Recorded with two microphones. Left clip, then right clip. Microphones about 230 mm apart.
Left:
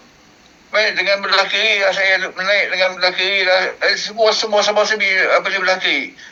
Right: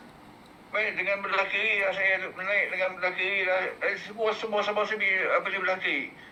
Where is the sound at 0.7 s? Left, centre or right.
Left.